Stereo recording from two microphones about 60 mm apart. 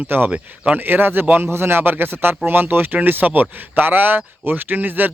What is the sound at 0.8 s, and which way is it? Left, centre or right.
Speech, right.